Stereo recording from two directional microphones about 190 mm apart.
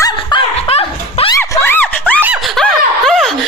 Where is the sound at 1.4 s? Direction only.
10° left (ahead or behind).